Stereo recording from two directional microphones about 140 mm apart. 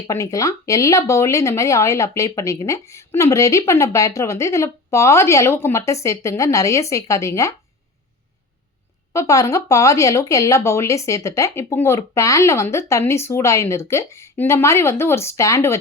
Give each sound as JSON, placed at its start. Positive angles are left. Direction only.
{"t": 0.1, "sound": "speech", "side_deg": 25}
{"t": 9.1, "sound": "speech", "side_deg": 25}